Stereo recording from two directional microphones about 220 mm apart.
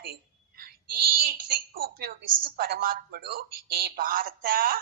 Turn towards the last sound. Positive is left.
turn(degrees=-40)  # may be behind; listen again after turning